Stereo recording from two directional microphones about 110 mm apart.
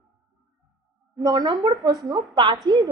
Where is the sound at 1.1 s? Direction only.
35° right (ahead or behind).